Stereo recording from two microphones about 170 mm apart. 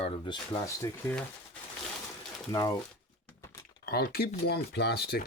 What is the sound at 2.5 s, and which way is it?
Speech, 20° left (ahead or behind).